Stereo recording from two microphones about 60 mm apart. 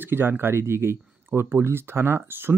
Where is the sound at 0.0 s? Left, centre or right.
Right.